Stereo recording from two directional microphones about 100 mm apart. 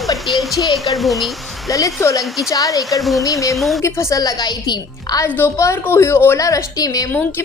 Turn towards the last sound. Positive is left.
turn(degrees=35)  # may be behind; listen again after turning